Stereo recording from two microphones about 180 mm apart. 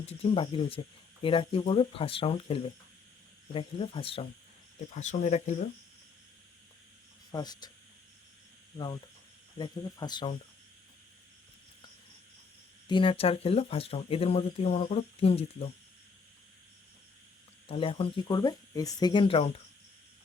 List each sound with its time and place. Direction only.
0.0 s speech: 35° left (ahead or behind)
4.9 s speech: 40° left (ahead or behind)
7.3 s cricket: 20° left (ahead or behind)
9.6 s speech: 25° left (ahead or behind)
12.9 s speech: 30° left (ahead or behind)
17.7 s speech: 30° left (ahead or behind)